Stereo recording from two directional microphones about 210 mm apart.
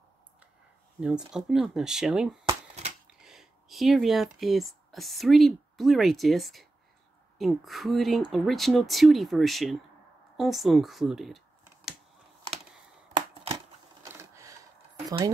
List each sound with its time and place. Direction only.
1.3 s speech: centre (ahead or behind)
2.4 s shuffling cards: 30° right (ahead or behind)
3.1 s speech: centre (ahead or behind)
14.1 s a sound: 15° right (ahead or behind)
15.0 s speech: 15° right (ahead or behind)